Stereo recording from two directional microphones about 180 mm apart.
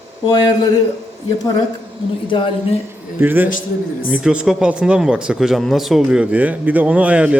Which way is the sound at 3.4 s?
45° left (ahead or behind).